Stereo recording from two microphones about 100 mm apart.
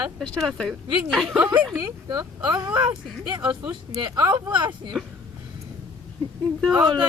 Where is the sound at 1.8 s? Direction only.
45° right (ahead or behind).